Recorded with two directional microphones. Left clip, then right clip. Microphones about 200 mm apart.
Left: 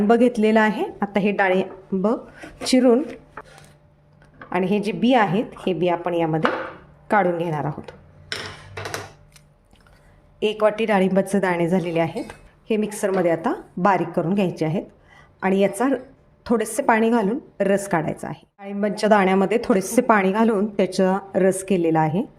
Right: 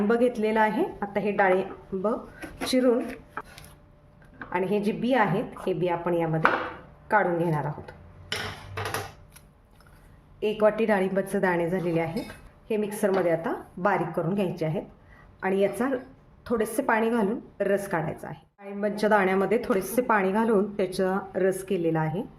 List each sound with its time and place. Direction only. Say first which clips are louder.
0.1 s a woman's voice: left 8 dB; 40° left (ahead or behind)
4.4 s a woman's voice: left 4 dB; 40° left (ahead or behind)
10.4 s a woman's voice: left 3 dB; 40° left (ahead or behind)